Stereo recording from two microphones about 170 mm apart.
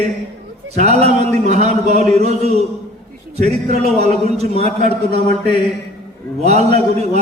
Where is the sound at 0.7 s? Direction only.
40° right (ahead or behind).